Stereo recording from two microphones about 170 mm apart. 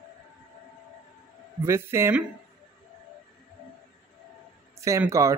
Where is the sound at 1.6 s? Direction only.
15° right (ahead or behind).